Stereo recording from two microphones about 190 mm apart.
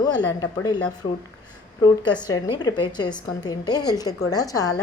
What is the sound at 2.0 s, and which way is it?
A woman's voice, 20° left (ahead or behind).